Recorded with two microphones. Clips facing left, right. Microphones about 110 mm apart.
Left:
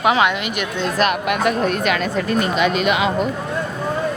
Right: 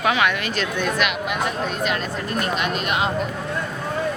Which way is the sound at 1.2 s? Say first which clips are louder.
Left 6 dB; 65° left (ahead or behind).